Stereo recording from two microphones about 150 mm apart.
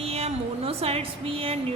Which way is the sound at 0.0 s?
40° right (ahead or behind).